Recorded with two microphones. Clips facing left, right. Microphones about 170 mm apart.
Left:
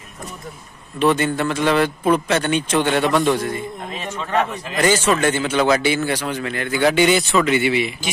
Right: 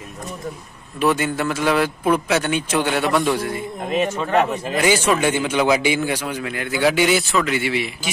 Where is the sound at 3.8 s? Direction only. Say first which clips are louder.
Right 7 dB; 45° right (ahead or behind).